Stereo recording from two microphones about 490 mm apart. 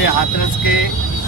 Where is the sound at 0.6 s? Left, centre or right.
Left.